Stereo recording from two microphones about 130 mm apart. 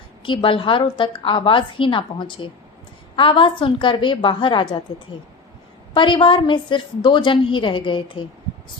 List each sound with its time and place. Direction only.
0.2 s a woman's voice: 40° left (ahead or behind)
5.9 s a woman's voice: 40° left (ahead or behind)